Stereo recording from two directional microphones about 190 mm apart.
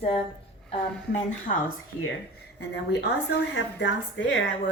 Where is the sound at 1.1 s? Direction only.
35° left (ahead or behind).